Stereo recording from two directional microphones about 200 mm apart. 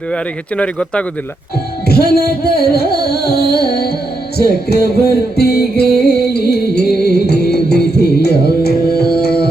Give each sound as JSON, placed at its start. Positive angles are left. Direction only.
{"t": 0.1, "sound": "speech", "side_deg": 5}
{"t": 1.9, "sound": "music", "side_deg": 50}